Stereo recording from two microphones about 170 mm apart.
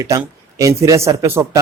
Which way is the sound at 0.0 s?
20° right (ahead or behind).